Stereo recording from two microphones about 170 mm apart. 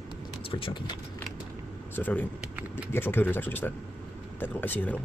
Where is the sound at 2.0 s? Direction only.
10° left (ahead or behind).